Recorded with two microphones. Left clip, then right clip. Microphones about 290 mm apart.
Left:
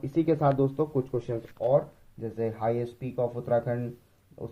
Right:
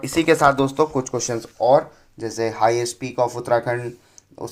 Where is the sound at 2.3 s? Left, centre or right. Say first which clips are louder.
Right 10 dB; centre.